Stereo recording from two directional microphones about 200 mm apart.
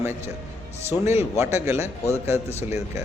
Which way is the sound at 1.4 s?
15° right (ahead or behind).